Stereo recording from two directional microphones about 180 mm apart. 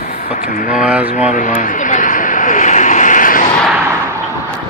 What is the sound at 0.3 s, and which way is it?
Speech, 50° left (ahead or behind).